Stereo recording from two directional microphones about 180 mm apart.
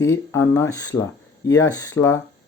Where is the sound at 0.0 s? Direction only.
15° left (ahead or behind).